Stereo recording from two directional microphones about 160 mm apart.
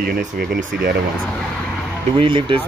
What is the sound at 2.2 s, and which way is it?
Speech, 30° right (ahead or behind).